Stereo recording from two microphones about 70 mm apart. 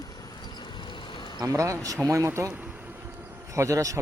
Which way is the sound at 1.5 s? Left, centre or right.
Right.